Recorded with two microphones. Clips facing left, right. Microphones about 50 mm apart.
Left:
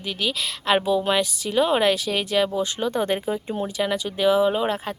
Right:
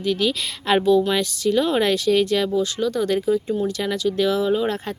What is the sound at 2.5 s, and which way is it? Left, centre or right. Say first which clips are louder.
Speech: right 3 dB; left.